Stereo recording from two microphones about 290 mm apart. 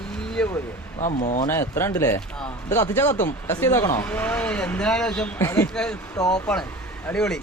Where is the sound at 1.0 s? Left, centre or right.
Left.